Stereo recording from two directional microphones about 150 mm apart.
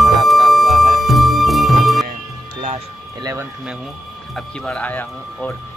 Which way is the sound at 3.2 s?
20° right (ahead or behind).